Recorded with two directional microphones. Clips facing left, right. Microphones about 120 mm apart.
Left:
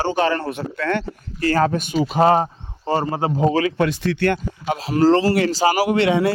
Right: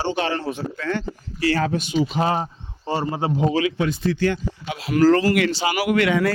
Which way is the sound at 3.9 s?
75° left (ahead or behind).